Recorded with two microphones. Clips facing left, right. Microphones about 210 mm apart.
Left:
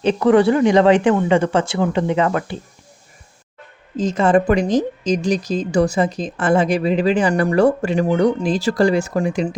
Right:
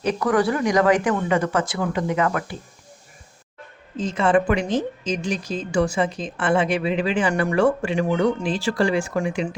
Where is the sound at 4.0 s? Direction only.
40° left (ahead or behind).